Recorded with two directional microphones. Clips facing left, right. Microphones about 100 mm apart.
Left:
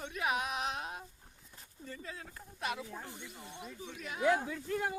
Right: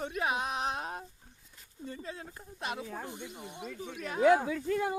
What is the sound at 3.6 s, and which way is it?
Speech, 70° right (ahead or behind).